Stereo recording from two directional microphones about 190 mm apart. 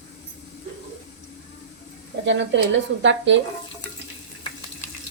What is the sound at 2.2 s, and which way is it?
A woman's voice, 70° right (ahead or behind).